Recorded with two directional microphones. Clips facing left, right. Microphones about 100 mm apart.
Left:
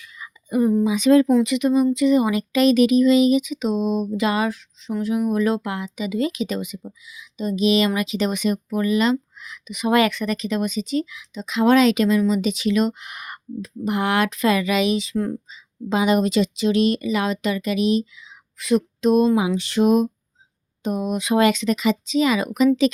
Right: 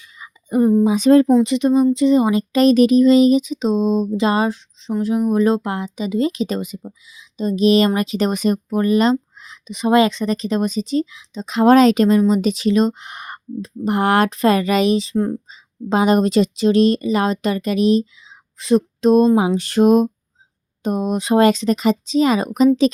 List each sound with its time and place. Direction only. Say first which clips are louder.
0.0 s whispering: left 1 dB; 30° right (ahead or behind)
0.9 s speech: right 2 dB; 35° right (ahead or behind)
19.0 s a sound: right 4 dB; 35° right (ahead or behind)
20.8 s speech: right 3 dB; 40° right (ahead or behind)